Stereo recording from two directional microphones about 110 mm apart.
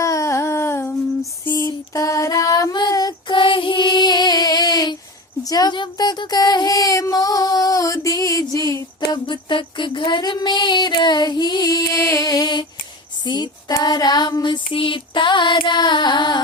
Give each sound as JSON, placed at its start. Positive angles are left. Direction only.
{"t": 0.0, "sound": "a sound", "side_deg": 30}
{"t": 1.5, "sound": "female singing", "side_deg": 30}
{"t": 5.4, "sound": "speech", "side_deg": 35}
{"t": 9.2, "sound": "speech", "side_deg": 50}
{"t": 13.2, "sound": "female singing", "side_deg": 40}